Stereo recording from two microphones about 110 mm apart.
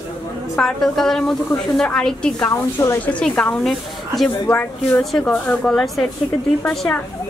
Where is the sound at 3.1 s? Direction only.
10° left (ahead or behind).